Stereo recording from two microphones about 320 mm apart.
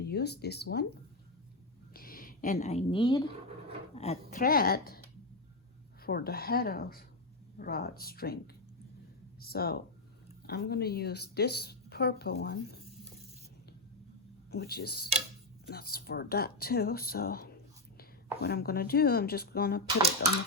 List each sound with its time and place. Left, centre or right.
0.0 s speech: left
1.9 s a sound: left
3.9 s speech: centre
6.0 s speech: left
9.4 s speech: left
14.5 s speech: left